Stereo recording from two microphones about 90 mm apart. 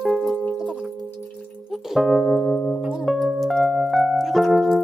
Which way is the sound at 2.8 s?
5° right (ahead or behind).